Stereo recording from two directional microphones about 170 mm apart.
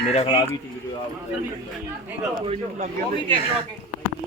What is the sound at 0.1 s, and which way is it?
Speech, 35° left (ahead or behind).